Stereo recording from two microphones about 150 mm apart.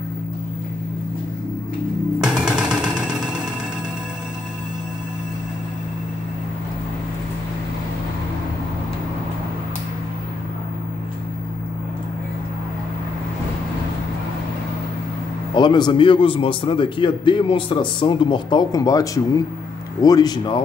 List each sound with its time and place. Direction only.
2.1 s music: 5° right (ahead or behind)
15.5 s a man's voice: 30° left (ahead or behind)